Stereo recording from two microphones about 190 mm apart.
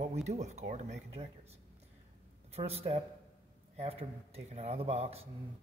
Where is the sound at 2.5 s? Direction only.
35° right (ahead or behind).